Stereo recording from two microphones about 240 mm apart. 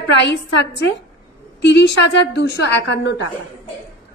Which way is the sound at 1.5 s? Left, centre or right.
Left.